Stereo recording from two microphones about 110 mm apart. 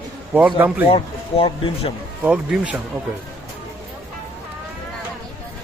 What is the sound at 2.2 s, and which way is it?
Speech, 10° right (ahead or behind).